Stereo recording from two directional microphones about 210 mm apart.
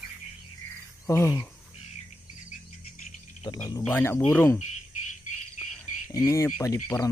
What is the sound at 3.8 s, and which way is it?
Speech, 10° left (ahead or behind).